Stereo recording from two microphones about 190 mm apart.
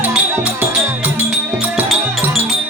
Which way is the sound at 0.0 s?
10° right (ahead or behind).